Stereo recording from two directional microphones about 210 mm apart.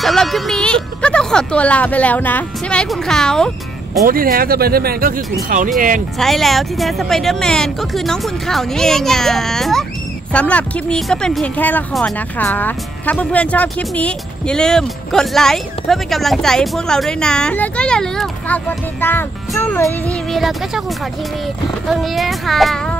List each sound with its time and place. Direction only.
0.0 s speech: centre (ahead or behind)
4.0 s speech: 45° right (ahead or behind)
6.1 s speech: centre (ahead or behind)
21.8 s speech: centre (ahead or behind)